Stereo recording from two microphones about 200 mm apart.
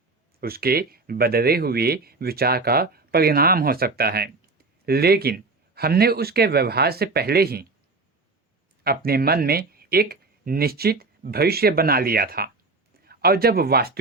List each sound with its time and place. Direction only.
0.3 s speech: 50° right (ahead or behind)
8.8 s speech: 50° right (ahead or behind)